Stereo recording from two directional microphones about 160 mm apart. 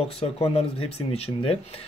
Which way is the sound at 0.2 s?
35° left (ahead or behind).